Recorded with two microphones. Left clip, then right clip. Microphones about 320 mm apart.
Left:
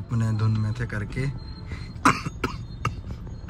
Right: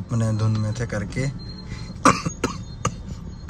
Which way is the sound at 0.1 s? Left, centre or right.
Centre.